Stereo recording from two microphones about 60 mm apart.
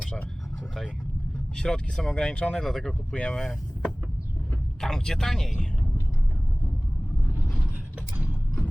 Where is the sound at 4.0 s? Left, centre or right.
Right.